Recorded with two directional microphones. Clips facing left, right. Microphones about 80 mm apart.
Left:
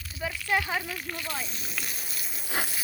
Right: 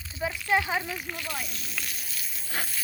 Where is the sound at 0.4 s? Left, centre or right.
Centre.